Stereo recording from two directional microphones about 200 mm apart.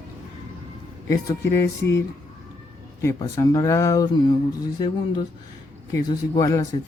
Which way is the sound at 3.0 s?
15° left (ahead or behind).